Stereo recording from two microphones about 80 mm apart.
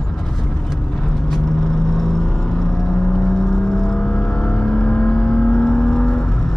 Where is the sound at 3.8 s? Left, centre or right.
Centre.